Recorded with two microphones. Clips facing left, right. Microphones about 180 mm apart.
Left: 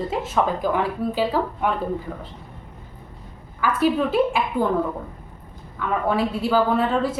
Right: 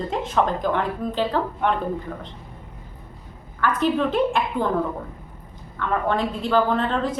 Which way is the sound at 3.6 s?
10° left (ahead or behind).